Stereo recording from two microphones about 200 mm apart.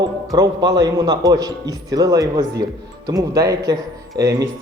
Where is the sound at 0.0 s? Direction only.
20° right (ahead or behind).